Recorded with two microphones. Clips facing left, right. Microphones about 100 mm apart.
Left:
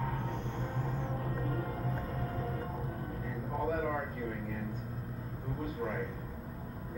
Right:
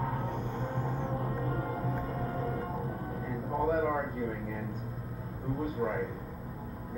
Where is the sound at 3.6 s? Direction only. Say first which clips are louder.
Right 5 dB; 25° right (ahead or behind).